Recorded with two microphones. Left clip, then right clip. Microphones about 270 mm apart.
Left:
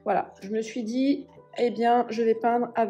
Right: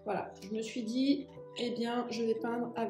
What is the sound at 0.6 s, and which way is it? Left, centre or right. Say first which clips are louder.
Speech: left 6 dB; centre.